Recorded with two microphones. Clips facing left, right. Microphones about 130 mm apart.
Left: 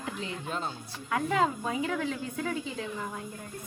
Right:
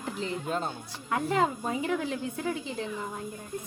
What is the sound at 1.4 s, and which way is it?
Speech, 30° right (ahead or behind).